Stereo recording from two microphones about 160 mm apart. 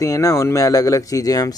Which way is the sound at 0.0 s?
20° left (ahead or behind).